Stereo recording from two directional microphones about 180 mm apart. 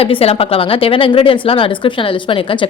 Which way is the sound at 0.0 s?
35° left (ahead or behind).